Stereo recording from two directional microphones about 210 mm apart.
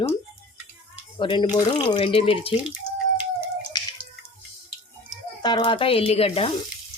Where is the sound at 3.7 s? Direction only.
20° left (ahead or behind).